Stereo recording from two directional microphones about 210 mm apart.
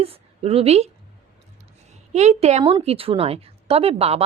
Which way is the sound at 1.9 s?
30° right (ahead or behind).